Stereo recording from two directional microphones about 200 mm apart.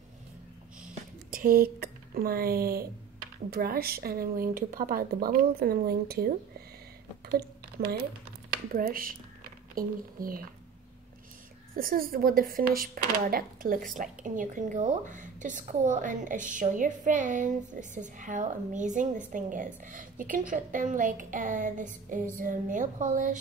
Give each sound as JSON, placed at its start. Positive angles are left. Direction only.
{"t": 1.3, "sound": "speech", "side_deg": -45}
{"t": 7.2, "sound": "a sound", "side_deg": -50}
{"t": 8.7, "sound": "speech", "side_deg": -45}
{"t": 11.7, "sound": "speech", "side_deg": -45}